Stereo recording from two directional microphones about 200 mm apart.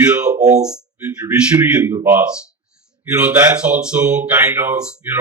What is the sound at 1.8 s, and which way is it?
Speech, 10° right (ahead or behind).